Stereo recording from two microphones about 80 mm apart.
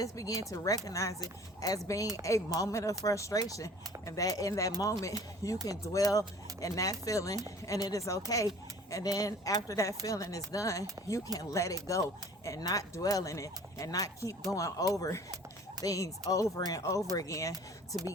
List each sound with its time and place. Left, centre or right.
0.0 s speech: left
17.5 s speech: right